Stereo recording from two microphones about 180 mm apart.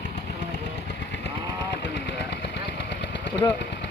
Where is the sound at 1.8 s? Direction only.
75° left (ahead or behind).